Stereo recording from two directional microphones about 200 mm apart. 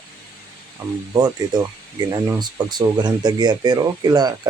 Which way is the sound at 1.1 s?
20° right (ahead or behind).